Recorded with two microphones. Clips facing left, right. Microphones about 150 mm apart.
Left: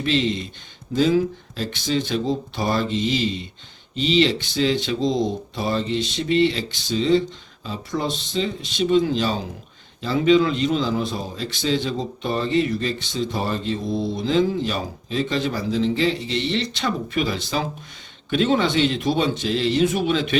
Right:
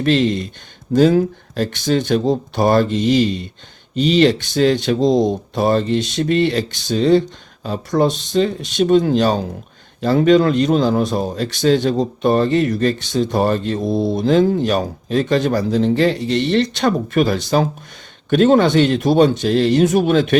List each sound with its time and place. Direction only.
0.0 s speech: 50° right (ahead or behind)